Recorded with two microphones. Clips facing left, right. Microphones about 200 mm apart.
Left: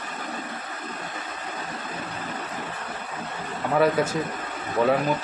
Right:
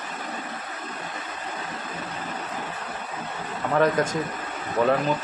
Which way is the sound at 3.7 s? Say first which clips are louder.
Even; 5° left (ahead or behind).